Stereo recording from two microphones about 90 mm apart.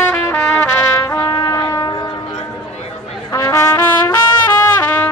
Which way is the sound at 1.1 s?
50° left (ahead or behind).